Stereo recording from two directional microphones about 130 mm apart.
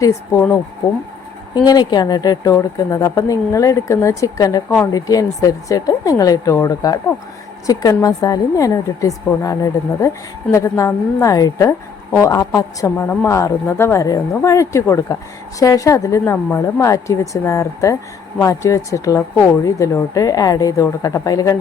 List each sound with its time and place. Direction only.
0.0 s speech: 20° left (ahead or behind)
1.5 s a woman's voice: 30° left (ahead or behind)